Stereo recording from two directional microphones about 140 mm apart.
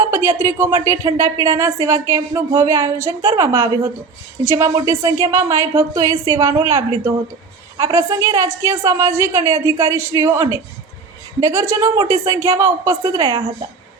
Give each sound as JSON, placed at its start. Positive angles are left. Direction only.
{"t": 0.0, "sound": "speech", "side_deg": -20}